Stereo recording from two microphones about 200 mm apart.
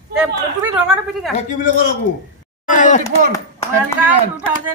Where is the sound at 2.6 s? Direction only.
40° left (ahead or behind).